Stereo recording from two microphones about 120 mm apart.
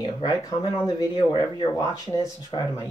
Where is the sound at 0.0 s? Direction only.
35° left (ahead or behind).